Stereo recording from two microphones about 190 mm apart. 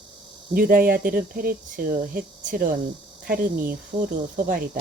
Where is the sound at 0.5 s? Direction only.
45° right (ahead or behind).